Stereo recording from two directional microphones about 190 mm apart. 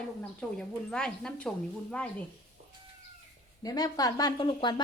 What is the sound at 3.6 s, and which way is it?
Speech, 20° left (ahead or behind).